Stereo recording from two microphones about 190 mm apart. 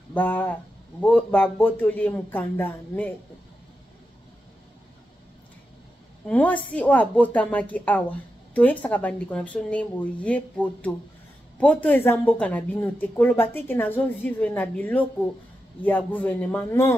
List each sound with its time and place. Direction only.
0.1 s speech: 10° left (ahead or behind)
6.2 s speech: 10° left (ahead or behind)